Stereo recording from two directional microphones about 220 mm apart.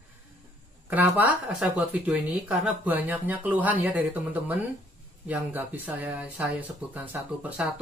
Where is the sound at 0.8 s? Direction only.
10° right (ahead or behind).